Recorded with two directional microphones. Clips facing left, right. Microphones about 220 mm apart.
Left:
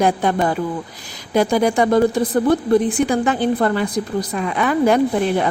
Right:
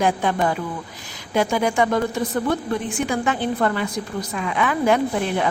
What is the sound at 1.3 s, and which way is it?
A woman's voice, 35° left (ahead or behind).